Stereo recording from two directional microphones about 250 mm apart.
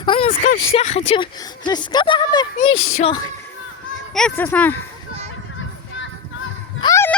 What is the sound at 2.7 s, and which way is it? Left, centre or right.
Speech, left.